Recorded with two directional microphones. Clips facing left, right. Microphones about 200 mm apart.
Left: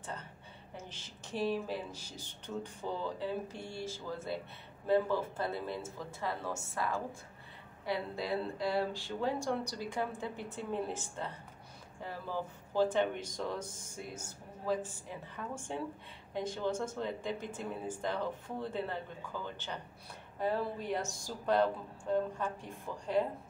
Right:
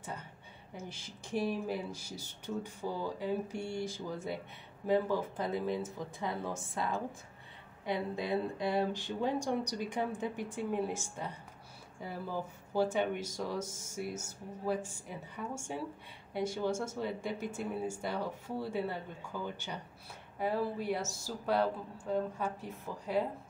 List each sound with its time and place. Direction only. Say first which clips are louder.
0.7 s speech: right 3 dB; 10° right (ahead or behind)
12.7 s speech: left 1 dB; 10° right (ahead or behind)